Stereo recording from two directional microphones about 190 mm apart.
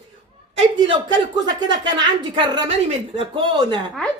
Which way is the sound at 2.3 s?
30° right (ahead or behind).